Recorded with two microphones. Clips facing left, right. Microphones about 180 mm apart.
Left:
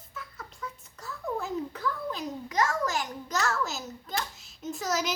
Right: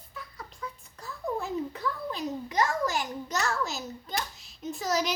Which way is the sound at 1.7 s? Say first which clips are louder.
Left 1 dB; 15° right (ahead or behind).